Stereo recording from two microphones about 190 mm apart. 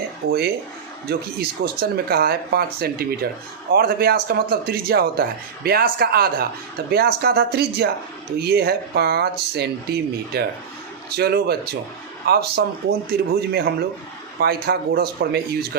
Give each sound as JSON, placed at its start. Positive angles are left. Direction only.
{"t": 0.3, "sound": "a man's voice", "side_deg": -55}